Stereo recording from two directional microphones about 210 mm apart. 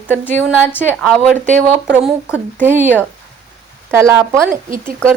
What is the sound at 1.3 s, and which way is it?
Speech, 35° right (ahead or behind).